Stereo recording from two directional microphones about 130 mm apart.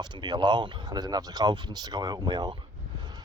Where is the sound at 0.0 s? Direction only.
35° right (ahead or behind).